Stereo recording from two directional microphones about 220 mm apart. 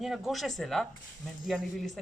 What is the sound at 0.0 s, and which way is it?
A woman's voice, centre (ahead or behind).